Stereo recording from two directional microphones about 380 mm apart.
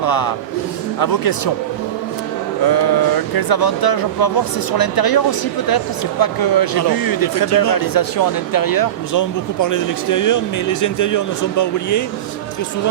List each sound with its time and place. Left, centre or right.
0.0 s a man's voice: left
2.6 s speech: left